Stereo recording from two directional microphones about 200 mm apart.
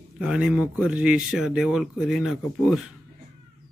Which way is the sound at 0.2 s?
5° right (ahead or behind).